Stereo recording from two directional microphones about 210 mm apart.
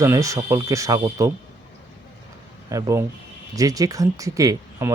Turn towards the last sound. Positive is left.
turn(degrees=-15)  # may be behind; listen again after turning